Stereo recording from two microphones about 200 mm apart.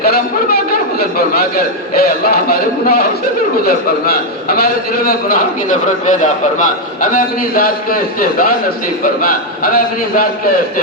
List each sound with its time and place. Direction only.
0.0 s a man's voice: 50° left (ahead or behind)